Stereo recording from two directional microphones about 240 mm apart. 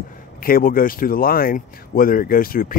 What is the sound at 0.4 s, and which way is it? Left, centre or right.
Speech, left.